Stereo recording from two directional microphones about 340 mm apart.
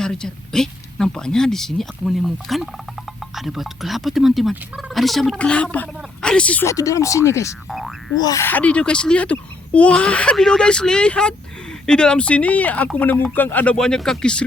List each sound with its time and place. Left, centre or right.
0.0 s speech: centre